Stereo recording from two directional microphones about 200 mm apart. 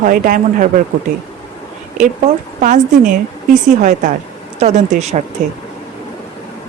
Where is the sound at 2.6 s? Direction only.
40° right (ahead or behind).